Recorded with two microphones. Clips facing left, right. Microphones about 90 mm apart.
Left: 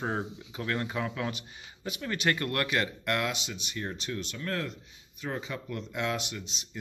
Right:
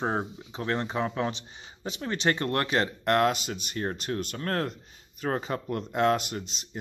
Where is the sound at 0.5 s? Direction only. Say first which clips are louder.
Right 3 dB; 30° right (ahead or behind).